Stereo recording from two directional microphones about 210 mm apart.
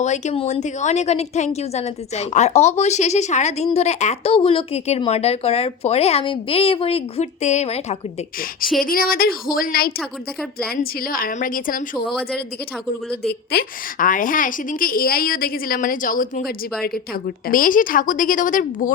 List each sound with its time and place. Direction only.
0.0 s a woman's voice: 35° left (ahead or behind)
8.8 s a woman's voice: 45° left (ahead or behind)
13.2 s a woman's voice: 45° left (ahead or behind)